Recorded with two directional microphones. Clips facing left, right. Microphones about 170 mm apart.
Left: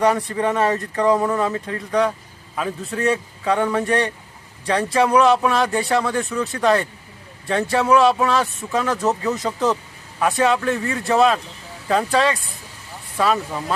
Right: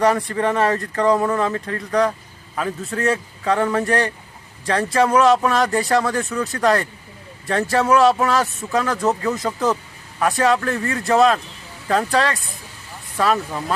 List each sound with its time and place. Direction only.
0.0 s speech: centre (ahead or behind)
1.1 s speech: 5° left (ahead or behind)